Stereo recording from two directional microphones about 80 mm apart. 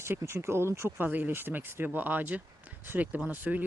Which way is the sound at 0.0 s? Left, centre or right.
Right.